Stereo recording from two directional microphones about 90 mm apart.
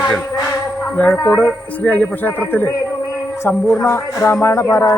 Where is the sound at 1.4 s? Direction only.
15° left (ahead or behind).